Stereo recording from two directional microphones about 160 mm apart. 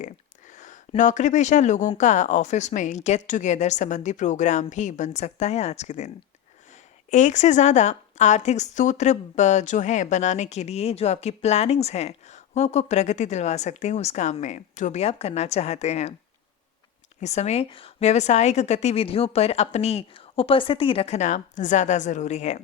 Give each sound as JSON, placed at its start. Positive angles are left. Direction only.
{"t": 0.0, "sound": "a sound", "side_deg": 50}
{"t": 2.0, "sound": "a woman's voice", "side_deg": 50}
{"t": 7.1, "sound": "a woman's voice", "side_deg": 50}
{"t": 17.2, "sound": "a woman's voice", "side_deg": 45}